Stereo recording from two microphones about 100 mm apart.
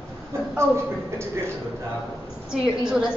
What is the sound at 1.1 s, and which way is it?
Speech, 25° right (ahead or behind).